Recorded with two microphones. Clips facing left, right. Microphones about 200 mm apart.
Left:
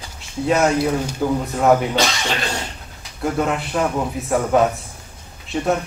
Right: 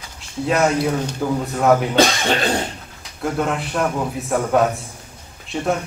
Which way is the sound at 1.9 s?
55° right (ahead or behind).